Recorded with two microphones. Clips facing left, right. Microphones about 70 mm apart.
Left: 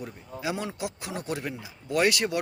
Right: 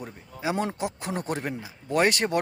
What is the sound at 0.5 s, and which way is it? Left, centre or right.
Speech, right.